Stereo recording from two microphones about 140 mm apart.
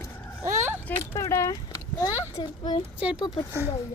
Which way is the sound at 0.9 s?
20° left (ahead or behind).